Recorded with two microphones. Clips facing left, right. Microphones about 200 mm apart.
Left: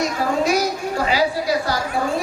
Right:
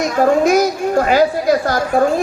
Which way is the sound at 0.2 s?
50° right (ahead or behind).